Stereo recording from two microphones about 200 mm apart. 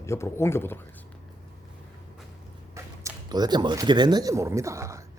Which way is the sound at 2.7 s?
15° right (ahead or behind).